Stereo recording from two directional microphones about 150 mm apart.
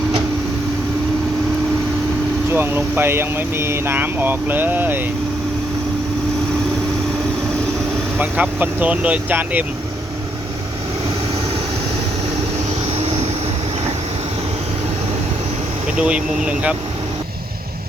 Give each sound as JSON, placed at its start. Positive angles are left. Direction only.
{"t": 2.5, "sound": "speech", "side_deg": -15}
{"t": 8.2, "sound": "speech", "side_deg": -10}
{"t": 13.0, "sound": "vehicle", "side_deg": -45}
{"t": 16.0, "sound": "speech", "side_deg": -5}